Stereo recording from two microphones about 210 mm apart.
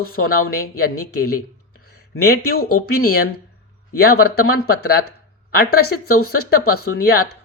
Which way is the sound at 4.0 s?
50° left (ahead or behind).